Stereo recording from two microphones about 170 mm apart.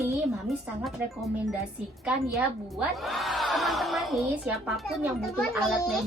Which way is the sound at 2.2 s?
20° right (ahead or behind).